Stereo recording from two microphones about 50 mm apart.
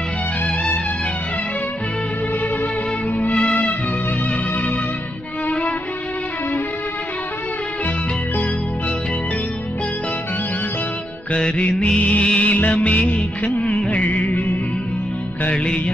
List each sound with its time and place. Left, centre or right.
11.3 s music: left
15.5 s music: centre